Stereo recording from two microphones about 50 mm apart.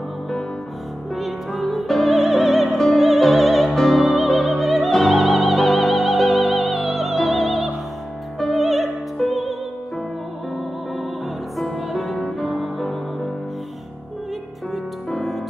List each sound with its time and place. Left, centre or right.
1.1 s music: centre
11.5 s music: centre
15.0 s music: centre